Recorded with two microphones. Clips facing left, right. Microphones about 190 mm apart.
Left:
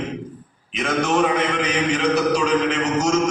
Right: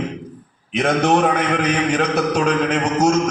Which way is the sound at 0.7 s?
60° right (ahead or behind).